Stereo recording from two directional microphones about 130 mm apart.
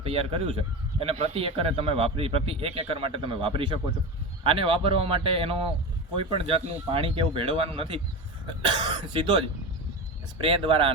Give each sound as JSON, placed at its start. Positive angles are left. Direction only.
{"t": 0.0, "sound": "a man's voice", "side_deg": -45}
{"t": 10.4, "sound": "a man's voice", "side_deg": -40}